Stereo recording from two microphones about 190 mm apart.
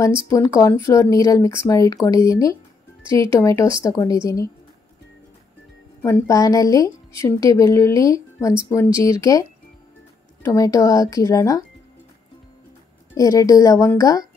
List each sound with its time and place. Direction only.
0.3 s speech: 15° left (ahead or behind)
3.1 s speech: 25° right (ahead or behind)
3.3 s speech: 15° left (ahead or behind)
6.0 s speech: 15° left (ahead or behind)
10.4 s speech: 15° left (ahead or behind)
13.1 s speech: 15° left (ahead or behind)